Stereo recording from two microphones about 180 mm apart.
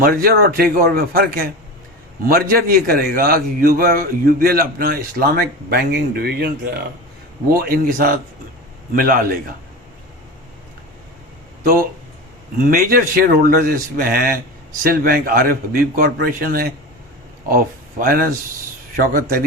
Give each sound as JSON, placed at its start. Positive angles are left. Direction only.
{"t": 0.0, "sound": "a man's voice", "side_deg": -55}
{"t": 7.5, "sound": "a man's voice", "side_deg": -55}
{"t": 11.6, "sound": "a man's voice", "side_deg": -50}